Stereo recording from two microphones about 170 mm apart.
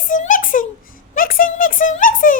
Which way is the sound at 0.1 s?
50° left (ahead or behind).